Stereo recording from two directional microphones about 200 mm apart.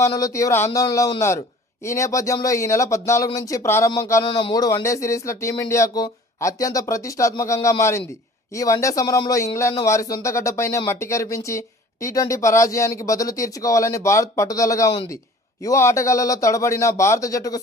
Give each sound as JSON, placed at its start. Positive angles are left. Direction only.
{"t": 0.0, "sound": "speech", "side_deg": 15}